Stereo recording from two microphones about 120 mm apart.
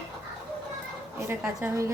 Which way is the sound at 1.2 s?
20° right (ahead or behind).